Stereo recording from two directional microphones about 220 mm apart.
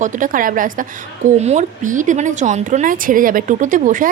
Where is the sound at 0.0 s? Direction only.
35° right (ahead or behind).